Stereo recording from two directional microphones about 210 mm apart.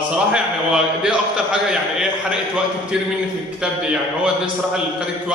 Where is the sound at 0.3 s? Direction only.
5° right (ahead or behind).